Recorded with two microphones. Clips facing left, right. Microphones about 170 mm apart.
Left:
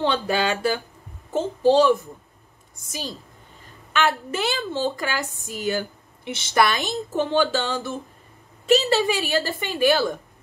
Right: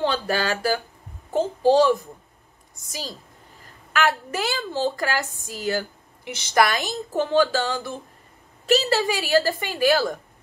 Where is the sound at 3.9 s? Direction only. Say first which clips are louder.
Even; 25° left (ahead or behind).